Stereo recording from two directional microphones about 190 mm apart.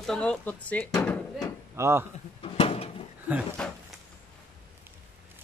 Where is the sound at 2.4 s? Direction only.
30° left (ahead or behind).